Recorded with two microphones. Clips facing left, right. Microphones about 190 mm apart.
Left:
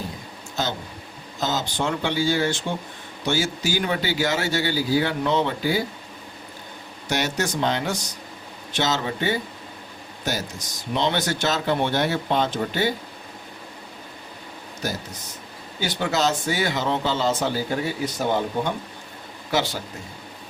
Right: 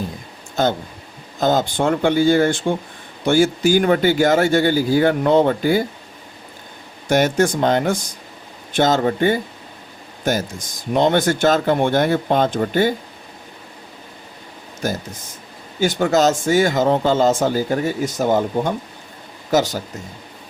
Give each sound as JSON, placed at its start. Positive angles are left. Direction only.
{"t": 0.6, "sound": "speech", "side_deg": -55}
{"t": 7.1, "sound": "speech", "side_deg": -50}
{"t": 14.8, "sound": "speech", "side_deg": -50}